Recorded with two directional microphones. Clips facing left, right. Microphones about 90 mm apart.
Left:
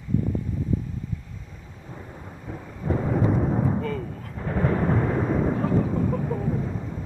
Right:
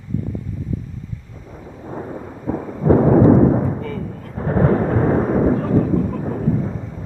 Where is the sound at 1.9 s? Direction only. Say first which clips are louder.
Right 12 dB; 50° right (ahead or behind).